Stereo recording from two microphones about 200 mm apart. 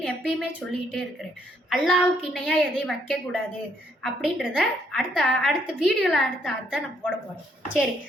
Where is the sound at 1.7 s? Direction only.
Centre (ahead or behind).